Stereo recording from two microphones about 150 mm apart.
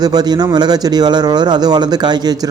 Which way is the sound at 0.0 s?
25° right (ahead or behind).